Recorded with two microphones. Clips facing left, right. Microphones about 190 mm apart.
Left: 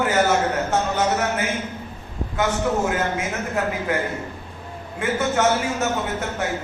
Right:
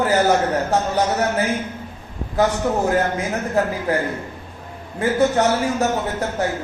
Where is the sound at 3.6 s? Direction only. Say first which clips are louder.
Right 5 dB; 35° right (ahead or behind).